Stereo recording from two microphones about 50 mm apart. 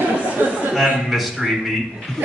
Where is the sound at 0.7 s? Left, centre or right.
Centre.